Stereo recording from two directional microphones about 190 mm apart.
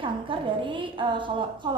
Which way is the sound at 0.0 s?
25° right (ahead or behind).